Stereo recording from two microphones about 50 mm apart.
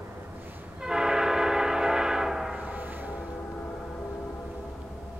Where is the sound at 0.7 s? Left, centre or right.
Centre.